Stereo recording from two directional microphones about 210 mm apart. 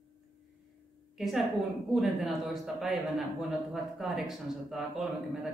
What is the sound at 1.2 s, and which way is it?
A man's voice, centre (ahead or behind).